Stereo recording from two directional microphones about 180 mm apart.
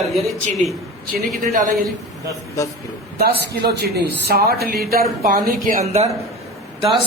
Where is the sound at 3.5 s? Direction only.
65° right (ahead or behind).